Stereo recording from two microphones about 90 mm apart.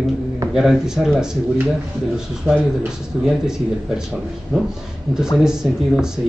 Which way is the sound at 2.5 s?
25° right (ahead or behind).